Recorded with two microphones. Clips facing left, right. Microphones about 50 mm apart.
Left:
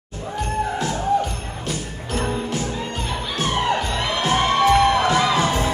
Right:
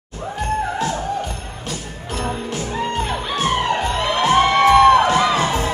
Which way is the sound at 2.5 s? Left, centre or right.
Right.